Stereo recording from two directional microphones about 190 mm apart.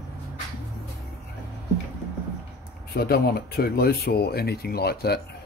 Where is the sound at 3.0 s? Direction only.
55° left (ahead or behind).